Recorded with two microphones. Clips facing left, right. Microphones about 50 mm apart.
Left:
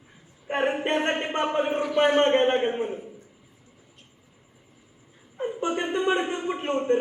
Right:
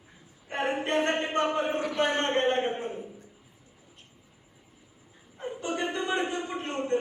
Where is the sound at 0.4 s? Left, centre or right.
Left.